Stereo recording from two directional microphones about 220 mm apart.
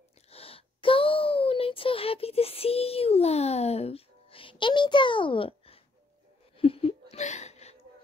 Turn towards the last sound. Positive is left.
turn(degrees=30)  # may be behind; listen again after turning